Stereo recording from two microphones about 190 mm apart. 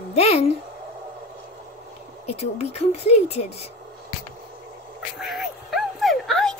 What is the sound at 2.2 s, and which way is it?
A woman's voice, 35° left (ahead or behind).